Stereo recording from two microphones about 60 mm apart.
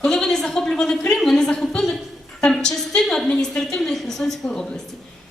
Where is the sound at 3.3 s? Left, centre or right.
Centre.